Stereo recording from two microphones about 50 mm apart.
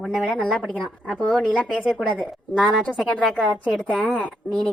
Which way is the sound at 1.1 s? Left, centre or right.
Left.